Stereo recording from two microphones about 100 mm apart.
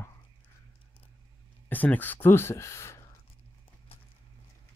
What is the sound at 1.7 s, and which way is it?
Speech, 15° left (ahead or behind).